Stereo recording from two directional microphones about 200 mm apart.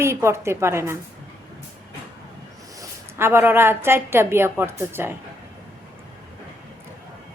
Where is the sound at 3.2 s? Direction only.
10° right (ahead or behind).